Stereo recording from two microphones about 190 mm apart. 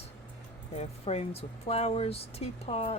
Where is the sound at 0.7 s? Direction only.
35° left (ahead or behind).